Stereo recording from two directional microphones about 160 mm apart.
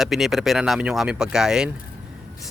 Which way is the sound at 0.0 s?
Centre (ahead or behind).